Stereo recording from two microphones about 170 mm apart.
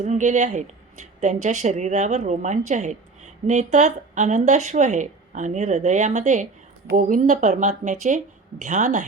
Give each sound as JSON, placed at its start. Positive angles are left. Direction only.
{"t": 0.0, "sound": "a woman's voice", "side_deg": -45}